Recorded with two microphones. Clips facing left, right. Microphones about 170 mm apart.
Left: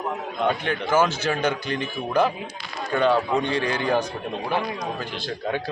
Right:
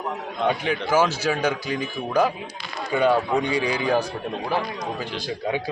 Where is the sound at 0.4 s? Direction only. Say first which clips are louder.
Right 1 dB; 10° right (ahead or behind).